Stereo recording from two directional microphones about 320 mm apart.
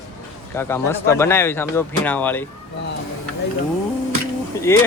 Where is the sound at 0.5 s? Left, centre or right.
Centre.